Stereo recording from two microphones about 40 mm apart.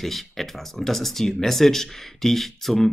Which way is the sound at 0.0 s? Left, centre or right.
Centre.